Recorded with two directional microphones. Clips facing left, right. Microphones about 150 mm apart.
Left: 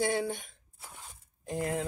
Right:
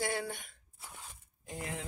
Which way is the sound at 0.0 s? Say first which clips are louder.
Left 6 dB; 20° left (ahead or behind).